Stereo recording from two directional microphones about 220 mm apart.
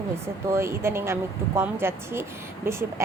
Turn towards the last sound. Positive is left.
turn(degrees=-10)  # may be behind; listen again after turning